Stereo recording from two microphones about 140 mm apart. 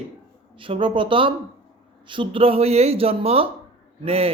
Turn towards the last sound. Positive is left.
turn(degrees=-45)  # may be behind; listen again after turning